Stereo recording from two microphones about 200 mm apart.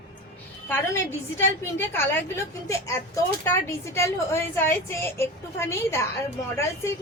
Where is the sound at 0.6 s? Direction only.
10° left (ahead or behind).